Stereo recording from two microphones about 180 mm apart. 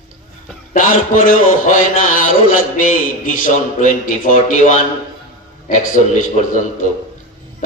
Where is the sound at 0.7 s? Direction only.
50° left (ahead or behind).